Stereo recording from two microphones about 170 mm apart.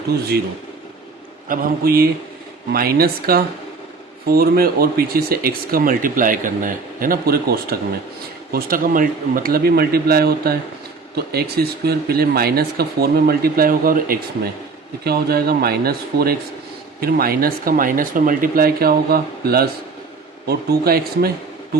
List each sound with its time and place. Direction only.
1.5 s speech: 60° right (ahead or behind)